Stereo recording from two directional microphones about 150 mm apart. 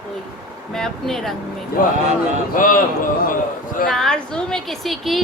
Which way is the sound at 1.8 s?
65° left (ahead or behind).